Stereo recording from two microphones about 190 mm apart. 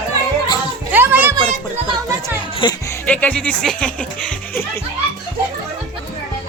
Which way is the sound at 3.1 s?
5° left (ahead or behind).